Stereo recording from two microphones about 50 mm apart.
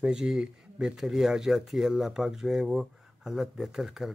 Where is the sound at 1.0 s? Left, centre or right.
Centre.